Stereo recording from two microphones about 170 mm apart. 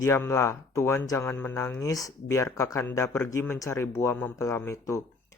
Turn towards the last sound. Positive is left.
turn(degrees=15)  # may be behind; listen again after turning